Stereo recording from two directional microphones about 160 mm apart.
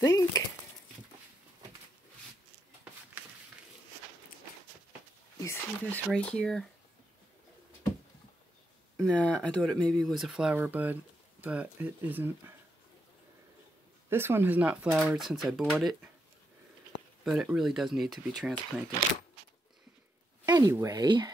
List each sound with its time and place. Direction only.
0.0 s speech: 20° left (ahead or behind)
5.4 s a sound: 15° left (ahead or behind)
6.0 s speech: 5° left (ahead or behind)
8.9 s speech: 5° left (ahead or behind)
10.5 s speech: 10° right (ahead or behind)
14.0 s speech: 15° right (ahead or behind)
17.2 s speech: centre (ahead or behind)
20.4 s speech: 20° right (ahead or behind)